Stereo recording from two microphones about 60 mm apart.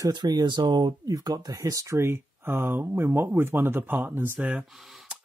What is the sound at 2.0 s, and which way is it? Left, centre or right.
Speech, right.